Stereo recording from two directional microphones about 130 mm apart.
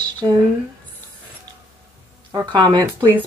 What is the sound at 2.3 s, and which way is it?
Speech, 35° right (ahead or behind).